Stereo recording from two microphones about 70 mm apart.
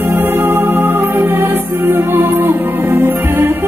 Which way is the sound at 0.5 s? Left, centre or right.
Right.